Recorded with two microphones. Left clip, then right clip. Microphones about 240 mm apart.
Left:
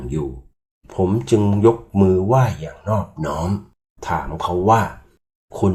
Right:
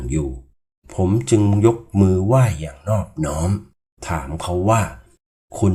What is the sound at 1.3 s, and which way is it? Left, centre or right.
Speech, right.